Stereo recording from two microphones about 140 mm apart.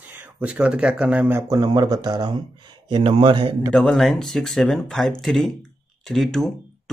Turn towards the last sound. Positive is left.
turn(degrees=5)  # may be behind; listen again after turning